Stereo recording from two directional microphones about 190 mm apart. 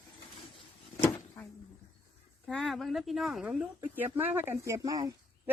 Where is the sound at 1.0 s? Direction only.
10° left (ahead or behind).